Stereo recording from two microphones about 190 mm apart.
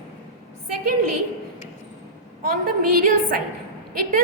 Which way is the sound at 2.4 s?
50° right (ahead or behind).